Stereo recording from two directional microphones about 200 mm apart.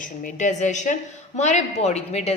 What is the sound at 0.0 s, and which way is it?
A woman's voice, 40° left (ahead or behind).